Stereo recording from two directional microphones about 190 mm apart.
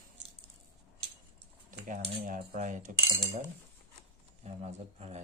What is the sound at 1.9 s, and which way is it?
Speech, 40° right (ahead or behind).